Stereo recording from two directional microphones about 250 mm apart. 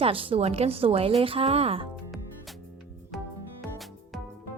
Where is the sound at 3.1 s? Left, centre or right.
Centre.